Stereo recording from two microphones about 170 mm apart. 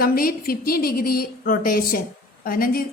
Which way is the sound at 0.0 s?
60° left (ahead or behind).